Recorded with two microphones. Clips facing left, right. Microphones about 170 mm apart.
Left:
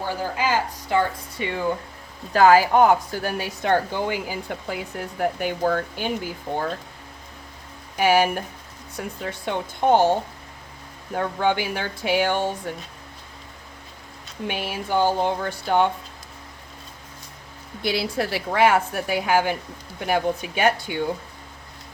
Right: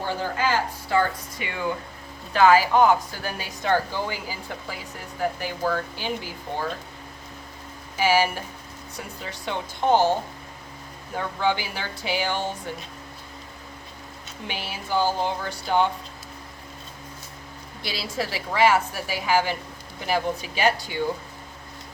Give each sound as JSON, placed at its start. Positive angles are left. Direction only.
{"t": 0.0, "sound": "a woman's voice", "side_deg": 10}
{"t": 0.9, "sound": "speech", "side_deg": 30}
{"t": 2.3, "sound": "a woman's voice", "side_deg": 45}
{"t": 7.9, "sound": "a woman's voice", "side_deg": 60}
{"t": 11.2, "sound": "a woman's voice", "side_deg": 50}
{"t": 14.4, "sound": "a woman's voice", "side_deg": 55}
{"t": 17.8, "sound": "a woman's voice", "side_deg": 55}